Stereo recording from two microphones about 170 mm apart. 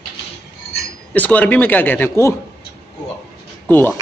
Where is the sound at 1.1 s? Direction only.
10° left (ahead or behind).